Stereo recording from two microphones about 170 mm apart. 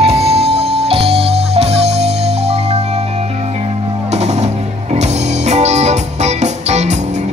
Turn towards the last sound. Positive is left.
turn(degrees=-40)  # may be behind; listen again after turning